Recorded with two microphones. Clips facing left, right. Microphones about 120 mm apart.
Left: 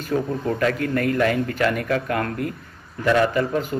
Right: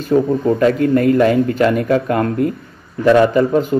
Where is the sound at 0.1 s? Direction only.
25° right (ahead or behind).